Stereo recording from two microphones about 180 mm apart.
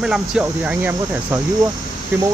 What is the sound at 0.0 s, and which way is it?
Speech, 5° right (ahead or behind).